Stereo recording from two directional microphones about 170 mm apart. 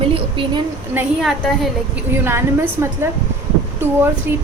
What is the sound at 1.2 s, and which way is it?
Speech, centre (ahead or behind).